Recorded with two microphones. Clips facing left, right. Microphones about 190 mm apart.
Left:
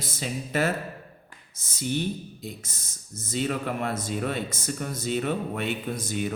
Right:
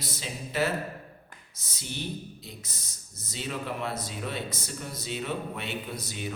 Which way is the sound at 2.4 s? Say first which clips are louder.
Left 6 dB; 50° left (ahead or behind).